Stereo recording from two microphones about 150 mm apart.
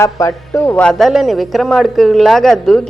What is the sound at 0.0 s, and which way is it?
A woman's voice, 20° left (ahead or behind).